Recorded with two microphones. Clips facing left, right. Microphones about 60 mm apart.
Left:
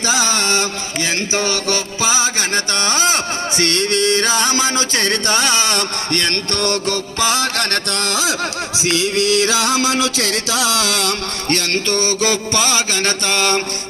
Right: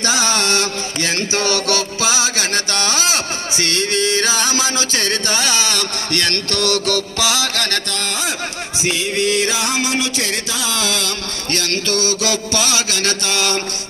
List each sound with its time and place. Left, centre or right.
0.0 s a sound: centre
1.3 s music: centre; by 3.2 s left
3.6 s music: left
6.1 s music: left
7.2 s music: left
8.0 s a sound: left
8.9 s music: left
11.4 s music: left